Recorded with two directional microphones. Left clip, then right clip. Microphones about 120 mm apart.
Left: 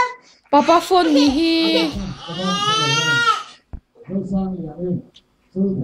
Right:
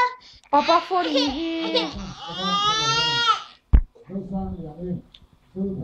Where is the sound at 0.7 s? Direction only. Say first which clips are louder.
Left 6 dB; 40° left (ahead or behind).